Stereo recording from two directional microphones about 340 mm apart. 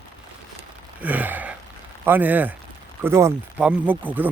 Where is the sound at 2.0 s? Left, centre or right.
Centre.